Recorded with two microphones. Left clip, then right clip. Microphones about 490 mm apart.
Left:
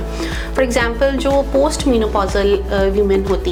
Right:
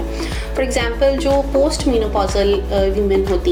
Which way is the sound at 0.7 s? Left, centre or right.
Left.